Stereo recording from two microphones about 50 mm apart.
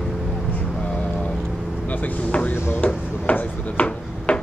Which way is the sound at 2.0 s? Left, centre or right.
Left.